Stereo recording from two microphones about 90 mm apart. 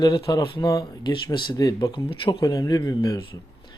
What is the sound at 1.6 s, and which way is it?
Speech, 40° left (ahead or behind).